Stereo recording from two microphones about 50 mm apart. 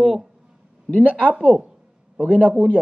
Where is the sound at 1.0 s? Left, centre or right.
Right.